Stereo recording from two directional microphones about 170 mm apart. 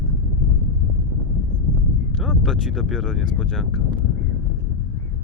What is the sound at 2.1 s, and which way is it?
Speech, centre (ahead or behind).